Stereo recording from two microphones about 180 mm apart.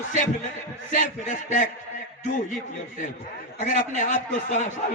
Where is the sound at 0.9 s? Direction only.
50° left (ahead or behind).